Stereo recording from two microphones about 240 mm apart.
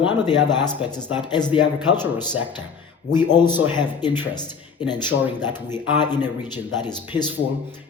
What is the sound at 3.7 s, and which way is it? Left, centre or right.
A man's voice, centre.